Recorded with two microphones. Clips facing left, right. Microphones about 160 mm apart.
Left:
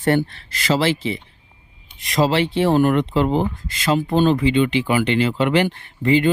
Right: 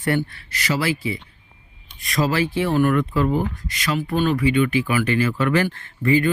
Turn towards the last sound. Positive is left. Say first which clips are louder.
# left 2 dB
turn(degrees=20)  # may be behind; listen again after turning